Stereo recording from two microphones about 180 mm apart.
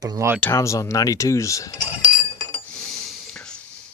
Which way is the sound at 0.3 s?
10° left (ahead or behind).